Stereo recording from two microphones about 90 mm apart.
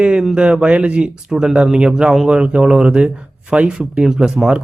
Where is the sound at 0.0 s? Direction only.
10° right (ahead or behind).